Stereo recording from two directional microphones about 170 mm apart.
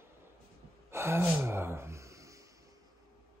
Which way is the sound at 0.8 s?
15° right (ahead or behind).